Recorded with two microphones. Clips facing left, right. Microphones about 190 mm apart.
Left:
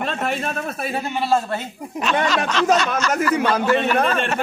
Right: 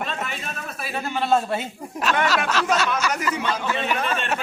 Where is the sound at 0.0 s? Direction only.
55° left (ahead or behind).